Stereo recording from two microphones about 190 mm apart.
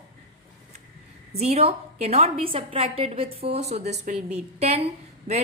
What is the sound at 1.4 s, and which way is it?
A woman's voice, 35° right (ahead or behind).